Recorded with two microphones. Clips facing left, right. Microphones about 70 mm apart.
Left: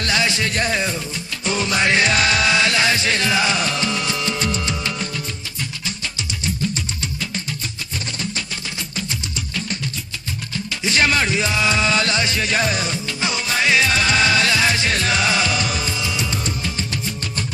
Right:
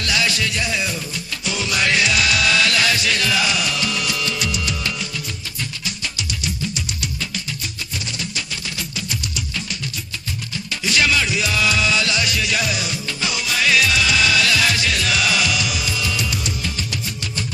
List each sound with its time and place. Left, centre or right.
0.0 s music: left
6.1 s music: left
10.8 s music: left